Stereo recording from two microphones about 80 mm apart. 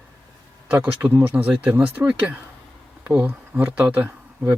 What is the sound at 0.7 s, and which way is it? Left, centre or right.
Speech, centre.